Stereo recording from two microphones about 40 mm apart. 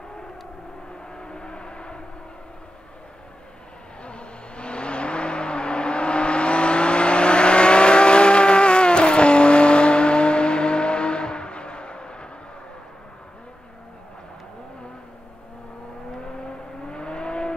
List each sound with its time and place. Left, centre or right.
1.1 s vehicle: left
4.0 s vehicle: left
16.8 s vehicle: left